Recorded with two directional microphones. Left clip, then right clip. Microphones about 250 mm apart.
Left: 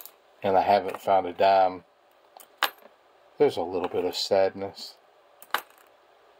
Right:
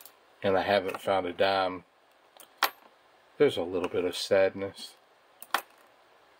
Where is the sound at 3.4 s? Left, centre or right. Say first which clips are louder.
Left 2 dB; centre.